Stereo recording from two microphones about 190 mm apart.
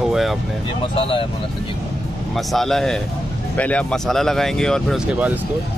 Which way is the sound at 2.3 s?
Centre (ahead or behind).